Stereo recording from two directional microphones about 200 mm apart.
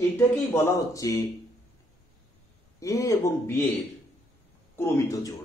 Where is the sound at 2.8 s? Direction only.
15° left (ahead or behind).